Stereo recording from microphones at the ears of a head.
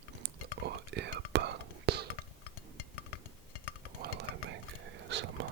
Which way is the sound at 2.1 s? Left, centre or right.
Left.